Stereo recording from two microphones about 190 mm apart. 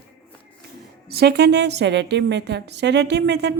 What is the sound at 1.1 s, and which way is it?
A woman's voice, 55° right (ahead or behind).